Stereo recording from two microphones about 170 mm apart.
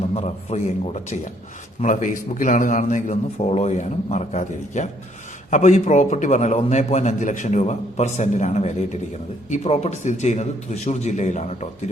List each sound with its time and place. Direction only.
0.1 s a man's voice: 40° left (ahead or behind)